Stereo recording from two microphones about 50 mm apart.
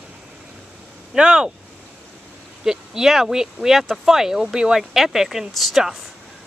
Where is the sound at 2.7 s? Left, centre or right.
Centre.